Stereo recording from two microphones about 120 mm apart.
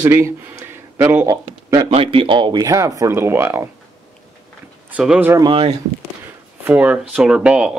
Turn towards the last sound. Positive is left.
turn(degrees=-10)  # may be behind; listen again after turning